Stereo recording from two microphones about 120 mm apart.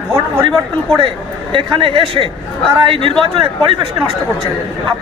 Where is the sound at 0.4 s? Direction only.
45° right (ahead or behind).